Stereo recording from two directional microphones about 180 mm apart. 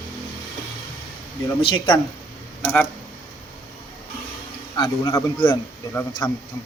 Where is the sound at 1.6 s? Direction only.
25° left (ahead or behind).